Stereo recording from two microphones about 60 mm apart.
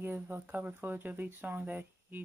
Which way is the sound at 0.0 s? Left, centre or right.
Right.